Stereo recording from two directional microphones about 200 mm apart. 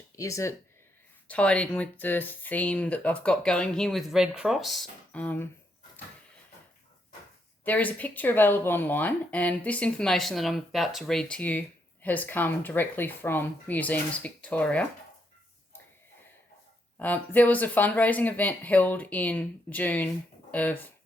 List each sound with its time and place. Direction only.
0.2 s speech: 15° left (ahead or behind)
7.6 s speech: 10° left (ahead or behind)
17.0 s speech: 10° left (ahead or behind)